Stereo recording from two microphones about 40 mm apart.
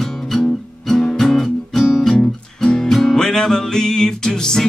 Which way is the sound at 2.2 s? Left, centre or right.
Centre.